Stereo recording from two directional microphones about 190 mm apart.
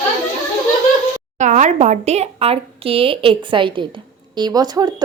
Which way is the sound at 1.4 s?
40° right (ahead or behind).